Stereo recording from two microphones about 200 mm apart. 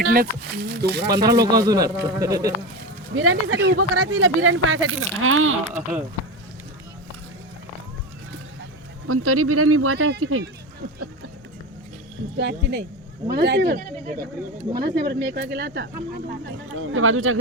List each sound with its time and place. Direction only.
0.0 s speech: 45° right (ahead or behind)
1.5 s speech: 20° right (ahead or behind)
3.2 s speech: 90° right
5.6 s speech: 10° right (ahead or behind)
9.0 s speech: 90° right
12.4 s speech: 60° right (ahead or behind)
16.7 s speech: 90° right